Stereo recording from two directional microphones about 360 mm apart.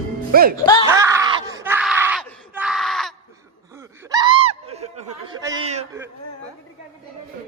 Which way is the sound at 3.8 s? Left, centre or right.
Centre.